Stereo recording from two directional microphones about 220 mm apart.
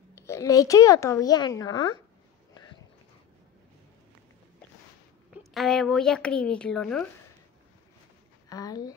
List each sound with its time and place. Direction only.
0.1 s speech: 15° left (ahead or behind)
5.4 s speech: centre (ahead or behind)
8.5 s speech: 15° left (ahead or behind)